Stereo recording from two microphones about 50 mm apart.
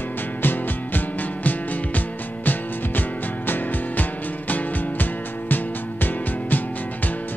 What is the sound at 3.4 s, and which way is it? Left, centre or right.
Music, left.